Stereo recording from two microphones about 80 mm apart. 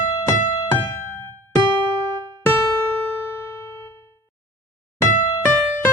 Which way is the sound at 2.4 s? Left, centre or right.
Left.